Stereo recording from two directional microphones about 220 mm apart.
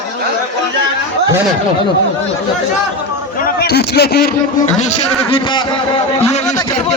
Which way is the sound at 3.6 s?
45° left (ahead or behind).